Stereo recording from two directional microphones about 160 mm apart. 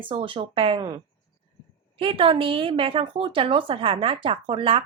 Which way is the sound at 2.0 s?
35° right (ahead or behind).